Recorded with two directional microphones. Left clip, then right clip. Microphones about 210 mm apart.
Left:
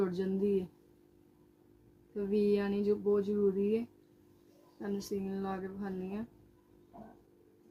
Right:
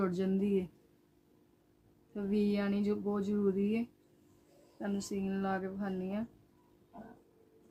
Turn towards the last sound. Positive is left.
turn(degrees=-30)  # may be behind; listen again after turning